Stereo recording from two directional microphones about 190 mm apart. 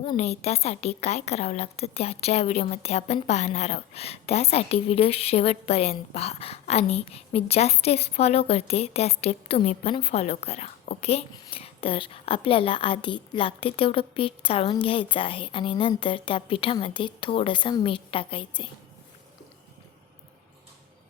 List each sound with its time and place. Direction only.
0.2 s a woman's voice: 35° left (ahead or behind)